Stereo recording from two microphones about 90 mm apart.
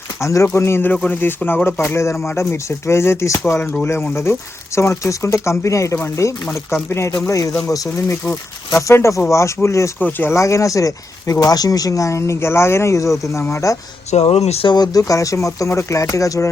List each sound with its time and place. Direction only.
0.2 s speech: 35° left (ahead or behind)
8.2 s speech: 20° left (ahead or behind)
8.8 s speech: 35° left (ahead or behind)
10.0 s speech: 20° left (ahead or behind)
10.3 s speech: 35° left (ahead or behind)
14.3 s speech: 80° left
14.8 s speech: 40° left (ahead or behind)